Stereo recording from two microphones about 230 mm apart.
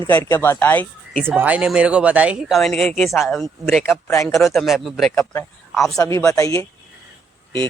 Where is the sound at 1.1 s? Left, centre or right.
Centre.